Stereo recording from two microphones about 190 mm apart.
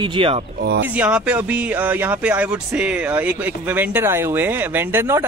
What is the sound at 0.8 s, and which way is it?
Speech, 5° right (ahead or behind).